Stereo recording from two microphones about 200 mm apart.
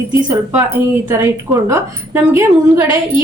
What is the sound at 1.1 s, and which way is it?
A woman's voice, 15° right (ahead or behind).